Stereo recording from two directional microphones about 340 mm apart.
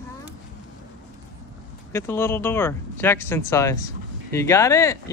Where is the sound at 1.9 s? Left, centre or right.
Centre.